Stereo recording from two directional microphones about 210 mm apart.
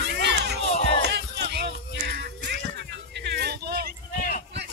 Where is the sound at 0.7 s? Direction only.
30° left (ahead or behind).